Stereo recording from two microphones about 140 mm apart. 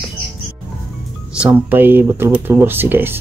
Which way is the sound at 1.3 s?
15° right (ahead or behind).